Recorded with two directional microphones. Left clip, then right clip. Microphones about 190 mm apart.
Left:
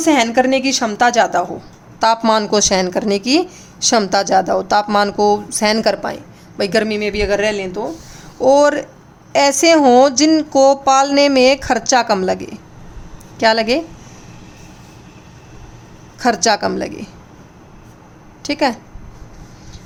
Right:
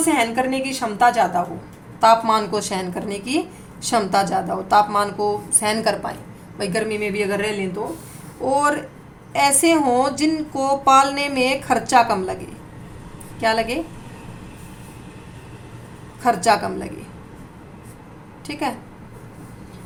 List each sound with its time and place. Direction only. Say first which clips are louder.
0.0 s a woman's voice: left 6 dB; 55° left (ahead or behind)
16.2 s a woman's voice: left 3 dB; 50° left (ahead or behind)
18.4 s a woman's voice: left 9 dB; 50° left (ahead or behind)